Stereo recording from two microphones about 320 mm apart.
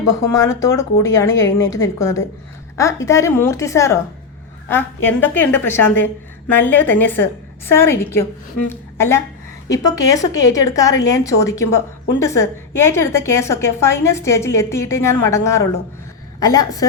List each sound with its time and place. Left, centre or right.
0.2 s a woman's voice: centre
1.3 s a woman's voice: left
1.5 s a woman's voice: centre